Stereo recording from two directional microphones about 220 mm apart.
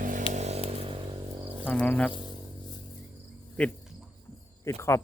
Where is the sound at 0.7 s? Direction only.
25° right (ahead or behind).